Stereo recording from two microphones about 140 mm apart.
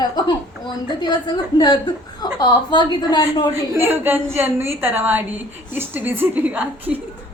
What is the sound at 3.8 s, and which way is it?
A woman's voice, 15° right (ahead or behind).